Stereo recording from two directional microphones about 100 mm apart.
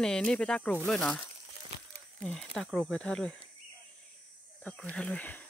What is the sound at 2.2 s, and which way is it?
Speech, 5° left (ahead or behind).